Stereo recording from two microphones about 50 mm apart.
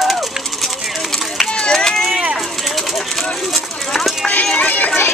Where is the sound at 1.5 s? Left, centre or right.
Centre.